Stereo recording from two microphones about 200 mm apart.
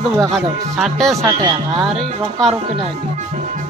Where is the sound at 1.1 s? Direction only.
15° right (ahead or behind).